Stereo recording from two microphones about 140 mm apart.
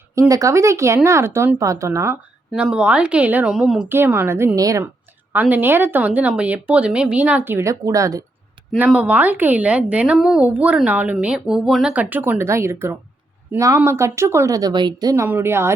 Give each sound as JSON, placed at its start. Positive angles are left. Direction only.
{"t": 0.2, "sound": "speech", "side_deg": -25}
{"t": 2.5, "sound": "a woman's voice", "side_deg": -5}
{"t": 5.3, "sound": "a woman's voice", "side_deg": -15}
{"t": 8.9, "sound": "a woman's voice", "side_deg": -10}